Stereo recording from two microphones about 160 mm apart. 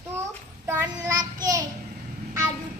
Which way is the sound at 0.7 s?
20° right (ahead or behind).